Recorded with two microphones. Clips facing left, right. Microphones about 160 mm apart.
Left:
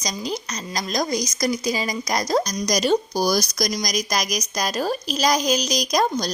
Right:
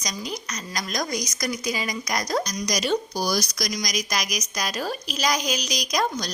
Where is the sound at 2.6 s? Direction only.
40° left (ahead or behind).